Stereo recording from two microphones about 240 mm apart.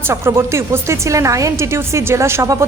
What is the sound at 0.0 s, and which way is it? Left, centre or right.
Speech, centre.